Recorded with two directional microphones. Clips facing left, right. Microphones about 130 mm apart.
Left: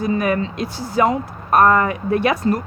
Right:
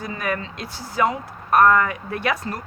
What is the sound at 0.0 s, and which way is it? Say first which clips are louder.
A woman's voice: left 8 dB; 20° left (ahead or behind).